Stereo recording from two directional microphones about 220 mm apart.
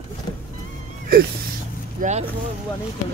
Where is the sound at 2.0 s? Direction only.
40° right (ahead or behind).